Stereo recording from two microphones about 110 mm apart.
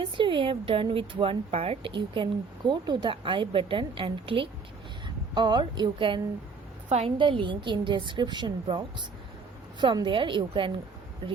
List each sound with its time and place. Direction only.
0.0 s a woman's voice: 50° right (ahead or behind)
2.0 s a woman's voice: 45° right (ahead or behind)
6.8 s a woman's voice: 85° right
7.2 s a woman's voice: 50° right (ahead or behind)